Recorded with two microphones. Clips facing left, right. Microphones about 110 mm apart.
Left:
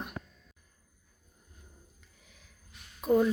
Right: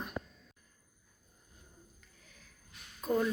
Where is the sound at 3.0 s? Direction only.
15° left (ahead or behind).